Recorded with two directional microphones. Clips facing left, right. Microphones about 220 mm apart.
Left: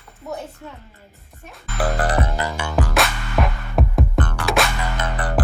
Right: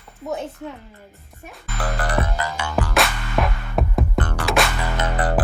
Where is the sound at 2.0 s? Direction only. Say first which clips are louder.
Right 1 dB; 40° left (ahead or behind).